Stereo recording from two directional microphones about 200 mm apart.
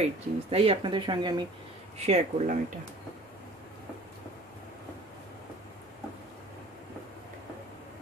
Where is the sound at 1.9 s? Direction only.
30° right (ahead or behind).